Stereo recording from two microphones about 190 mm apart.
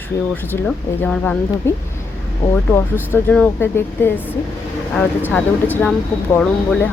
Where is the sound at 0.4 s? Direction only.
10° left (ahead or behind).